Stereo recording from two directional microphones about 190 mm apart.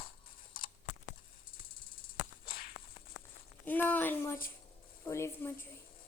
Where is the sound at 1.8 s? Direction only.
50° left (ahead or behind).